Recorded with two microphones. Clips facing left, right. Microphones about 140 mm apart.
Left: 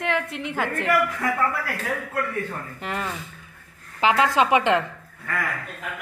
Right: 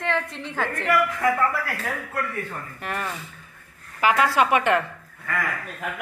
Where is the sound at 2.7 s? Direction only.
20° left (ahead or behind).